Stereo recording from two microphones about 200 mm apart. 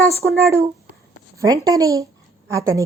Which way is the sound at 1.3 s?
15° right (ahead or behind).